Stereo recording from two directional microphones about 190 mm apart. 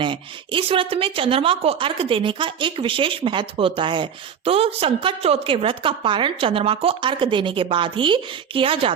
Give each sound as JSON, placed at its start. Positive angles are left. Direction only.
{"t": 0.0, "sound": "a woman's voice", "side_deg": -25}